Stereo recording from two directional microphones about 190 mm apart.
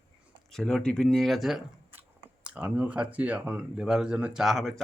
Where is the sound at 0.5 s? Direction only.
5° left (ahead or behind).